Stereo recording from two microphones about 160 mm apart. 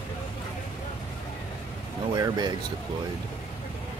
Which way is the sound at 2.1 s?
25° right (ahead or behind).